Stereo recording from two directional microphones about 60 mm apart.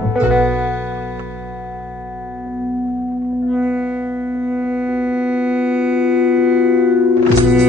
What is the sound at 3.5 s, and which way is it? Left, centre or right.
Music, centre.